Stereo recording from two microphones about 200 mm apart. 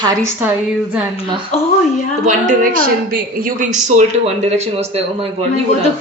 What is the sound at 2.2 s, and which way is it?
Speech, 40° right (ahead or behind).